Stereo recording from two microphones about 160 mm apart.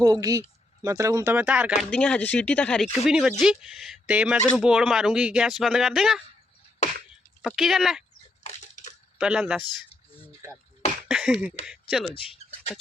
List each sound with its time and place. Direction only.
0.0 s speech: 20° right (ahead or behind)
1.8 s speech: 5° left (ahead or behind)
3.0 s speech: 5° right (ahead or behind)
7.4 s speech: centre (ahead or behind)
8.4 s crushing: 45° left (ahead or behind)
9.1 s speech: 5° right (ahead or behind)
11.1 s a sound: 5° right (ahead or behind)
11.6 s speech: centre (ahead or behind)
12.1 s speech: 35° left (ahead or behind)